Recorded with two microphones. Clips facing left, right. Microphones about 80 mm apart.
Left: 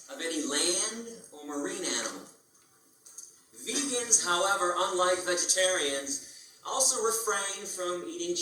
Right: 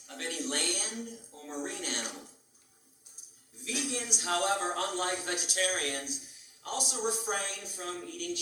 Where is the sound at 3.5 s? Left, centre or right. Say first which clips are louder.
Left 3 dB; left.